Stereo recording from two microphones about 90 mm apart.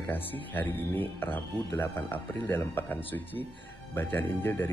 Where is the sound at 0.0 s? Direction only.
20° left (ahead or behind).